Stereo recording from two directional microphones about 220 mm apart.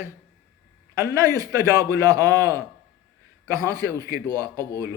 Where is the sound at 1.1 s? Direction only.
15° right (ahead or behind).